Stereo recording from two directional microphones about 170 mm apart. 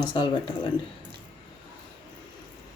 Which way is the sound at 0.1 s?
30° left (ahead or behind).